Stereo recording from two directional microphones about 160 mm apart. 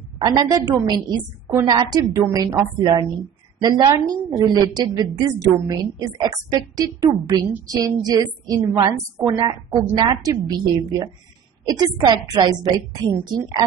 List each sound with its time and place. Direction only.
0.2 s a woman's voice: 25° right (ahead or behind)